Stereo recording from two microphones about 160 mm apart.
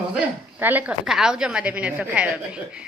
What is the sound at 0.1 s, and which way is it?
A woman's voice, 10° right (ahead or behind).